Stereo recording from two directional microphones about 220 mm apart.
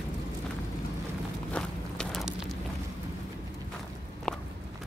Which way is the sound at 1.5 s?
5° left (ahead or behind).